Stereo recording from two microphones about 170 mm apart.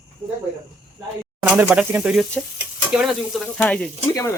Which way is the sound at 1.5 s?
10° right (ahead or behind).